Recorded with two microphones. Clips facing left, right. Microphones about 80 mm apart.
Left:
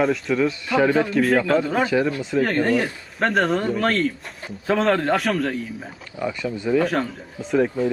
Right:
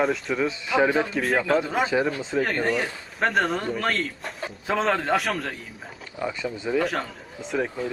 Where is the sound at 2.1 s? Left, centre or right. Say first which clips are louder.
Left 3 dB; right.